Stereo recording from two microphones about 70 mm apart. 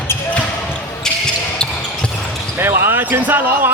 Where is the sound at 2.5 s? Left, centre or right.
Right.